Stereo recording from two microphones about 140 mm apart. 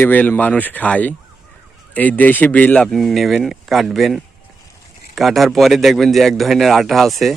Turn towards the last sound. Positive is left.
turn(degrees=0)  # may be behind; listen again after turning